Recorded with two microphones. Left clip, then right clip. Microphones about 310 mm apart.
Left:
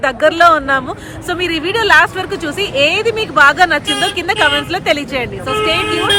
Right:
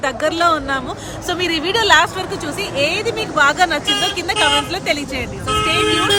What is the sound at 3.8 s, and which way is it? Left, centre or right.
Speech, left.